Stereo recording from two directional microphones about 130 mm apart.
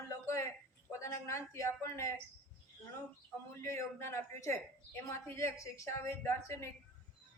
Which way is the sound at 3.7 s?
20° left (ahead or behind).